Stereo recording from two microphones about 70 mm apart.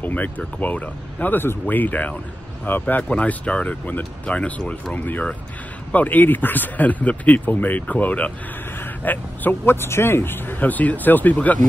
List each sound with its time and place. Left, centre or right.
0.0 s a man's voice: left